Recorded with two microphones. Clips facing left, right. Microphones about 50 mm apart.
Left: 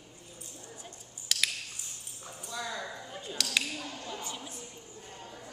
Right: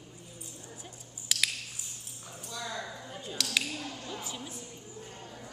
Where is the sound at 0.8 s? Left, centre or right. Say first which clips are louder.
Even; centre.